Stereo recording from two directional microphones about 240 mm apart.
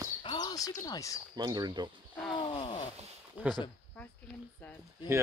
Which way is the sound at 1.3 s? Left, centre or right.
Centre.